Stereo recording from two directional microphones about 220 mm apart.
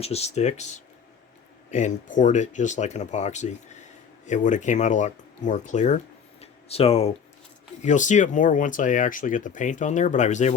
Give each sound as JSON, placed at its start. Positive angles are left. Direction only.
{"t": 0.0, "sound": "speech", "side_deg": 30}
{"t": 6.4, "sound": "a sound", "side_deg": 25}
{"t": 7.9, "sound": "speech", "side_deg": 35}